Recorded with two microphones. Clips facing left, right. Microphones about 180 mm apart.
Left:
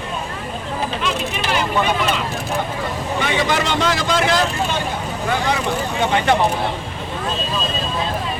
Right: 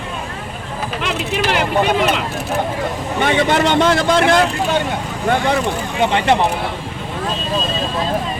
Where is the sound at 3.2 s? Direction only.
60° right (ahead or behind).